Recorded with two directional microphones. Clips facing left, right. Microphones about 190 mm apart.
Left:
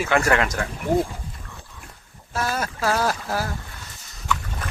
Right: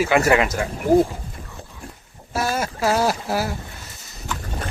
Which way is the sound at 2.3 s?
10° right (ahead or behind).